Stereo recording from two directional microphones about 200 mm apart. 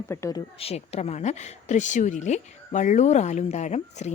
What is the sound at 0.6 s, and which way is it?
Speech, 30° left (ahead or behind).